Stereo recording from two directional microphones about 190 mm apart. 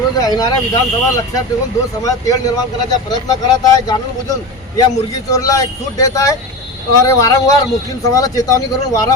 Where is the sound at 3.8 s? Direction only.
20° left (ahead or behind).